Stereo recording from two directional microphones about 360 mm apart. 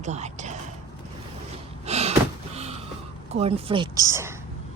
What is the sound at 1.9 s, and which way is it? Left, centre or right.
Door, centre.